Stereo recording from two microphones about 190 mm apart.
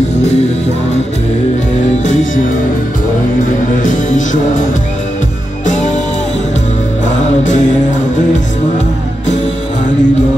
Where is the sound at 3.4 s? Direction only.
40° left (ahead or behind).